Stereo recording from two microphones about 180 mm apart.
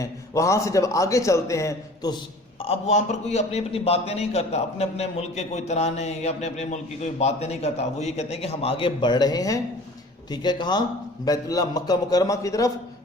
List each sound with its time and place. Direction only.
0.0 s a man's voice: 15° left (ahead or behind)
2.6 s a man's voice: 40° left (ahead or behind); by 12.7 s 20° left (ahead or behind)